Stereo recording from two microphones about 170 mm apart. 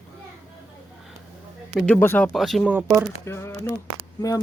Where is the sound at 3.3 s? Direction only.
15° left (ahead or behind).